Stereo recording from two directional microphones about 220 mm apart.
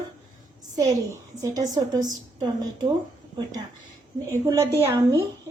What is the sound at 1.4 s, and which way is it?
Speech, 15° right (ahead or behind).